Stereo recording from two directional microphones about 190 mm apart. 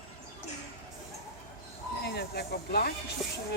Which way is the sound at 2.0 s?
60° left (ahead or behind).